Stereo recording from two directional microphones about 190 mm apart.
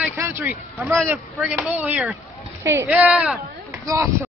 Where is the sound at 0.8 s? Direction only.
Centre (ahead or behind).